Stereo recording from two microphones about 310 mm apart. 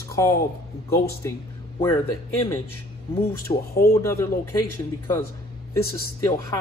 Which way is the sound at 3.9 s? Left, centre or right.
Centre.